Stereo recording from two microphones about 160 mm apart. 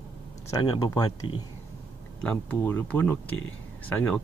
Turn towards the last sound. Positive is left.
turn(degrees=10)  # may be behind; listen again after turning